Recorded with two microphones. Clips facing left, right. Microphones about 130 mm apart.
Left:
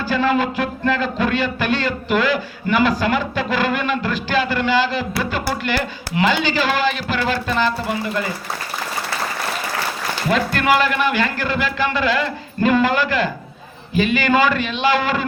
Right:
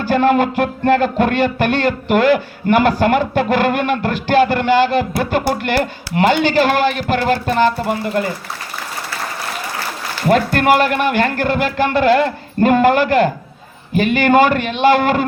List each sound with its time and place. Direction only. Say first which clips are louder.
0.0 s speech: right 5 dB; 55° right (ahead or behind)
10.2 s speech: right 5 dB; 50° right (ahead or behind)